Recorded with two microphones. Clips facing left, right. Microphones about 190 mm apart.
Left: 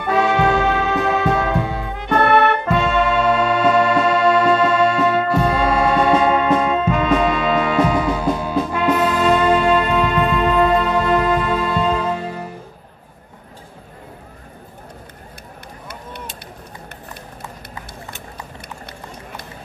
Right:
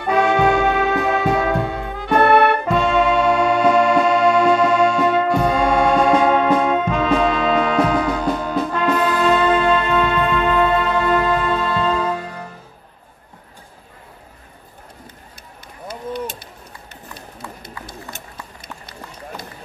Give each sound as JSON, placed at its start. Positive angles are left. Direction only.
{"t": 0.1, "sound": "brass instrument", "side_deg": 0}
{"t": 2.0, "sound": "music", "side_deg": -10}
{"t": 2.7, "sound": "music", "side_deg": 0}